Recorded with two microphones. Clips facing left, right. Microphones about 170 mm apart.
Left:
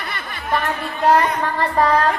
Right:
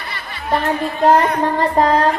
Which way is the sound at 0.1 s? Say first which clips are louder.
Even; 50° left (ahead or behind).